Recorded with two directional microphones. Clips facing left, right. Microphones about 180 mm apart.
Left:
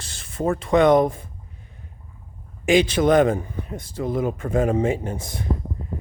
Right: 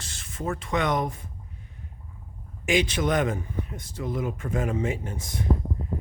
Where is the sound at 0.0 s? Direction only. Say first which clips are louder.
Left 8 dB; 35° left (ahead or behind).